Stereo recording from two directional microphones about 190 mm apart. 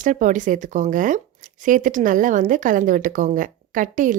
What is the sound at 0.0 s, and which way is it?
Speech, 45° right (ahead or behind).